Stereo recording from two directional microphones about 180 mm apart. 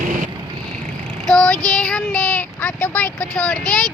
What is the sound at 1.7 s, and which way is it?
Speech, 5° left (ahead or behind).